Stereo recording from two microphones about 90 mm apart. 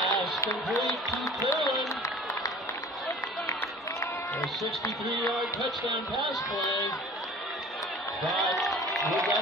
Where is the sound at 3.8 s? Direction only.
35° left (ahead or behind).